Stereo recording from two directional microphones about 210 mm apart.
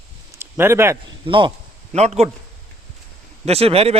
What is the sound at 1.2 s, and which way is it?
A man's voice, 25° right (ahead or behind).